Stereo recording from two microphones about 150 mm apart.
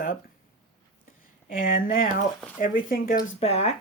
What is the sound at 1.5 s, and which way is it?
A woman's voice, 65° left (ahead or behind).